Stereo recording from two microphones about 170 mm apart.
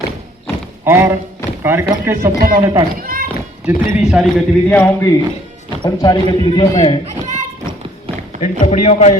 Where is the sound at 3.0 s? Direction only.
60° right (ahead or behind).